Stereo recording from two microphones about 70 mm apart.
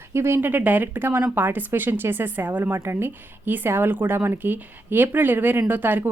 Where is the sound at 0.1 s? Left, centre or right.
Right.